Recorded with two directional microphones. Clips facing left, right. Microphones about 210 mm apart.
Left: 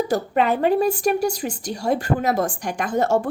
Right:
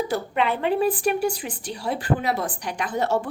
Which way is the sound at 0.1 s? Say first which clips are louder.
Left 4 dB; 40° left (ahead or behind).